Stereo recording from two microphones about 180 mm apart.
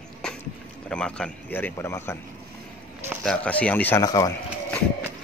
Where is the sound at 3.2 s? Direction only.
5° left (ahead or behind).